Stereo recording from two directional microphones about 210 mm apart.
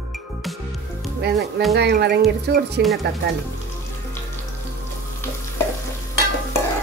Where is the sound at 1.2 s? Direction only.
50° right (ahead or behind).